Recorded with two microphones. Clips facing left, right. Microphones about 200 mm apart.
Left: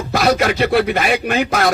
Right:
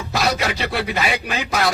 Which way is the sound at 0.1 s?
55° left (ahead or behind).